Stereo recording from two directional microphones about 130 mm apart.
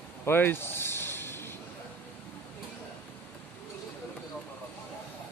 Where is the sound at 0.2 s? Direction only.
15° left (ahead or behind).